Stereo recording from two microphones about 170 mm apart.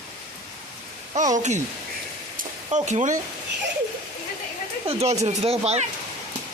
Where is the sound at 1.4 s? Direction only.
45° right (ahead or behind).